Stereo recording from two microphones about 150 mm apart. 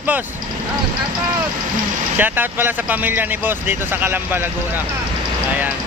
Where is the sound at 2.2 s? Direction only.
15° right (ahead or behind).